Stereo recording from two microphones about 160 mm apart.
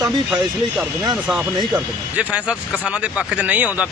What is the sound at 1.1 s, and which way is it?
Speech, 5° right (ahead or behind).